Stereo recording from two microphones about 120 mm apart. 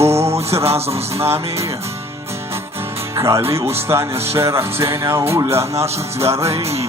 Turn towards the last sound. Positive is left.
turn(degrees=-25)  # may be behind; listen again after turning